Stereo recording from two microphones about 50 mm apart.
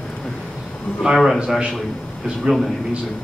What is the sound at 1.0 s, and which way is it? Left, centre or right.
Speech, centre.